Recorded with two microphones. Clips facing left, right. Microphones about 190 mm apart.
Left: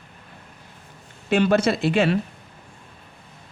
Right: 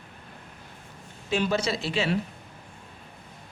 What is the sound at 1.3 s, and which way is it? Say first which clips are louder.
Speech: left 7 dB; 60° left (ahead or behind).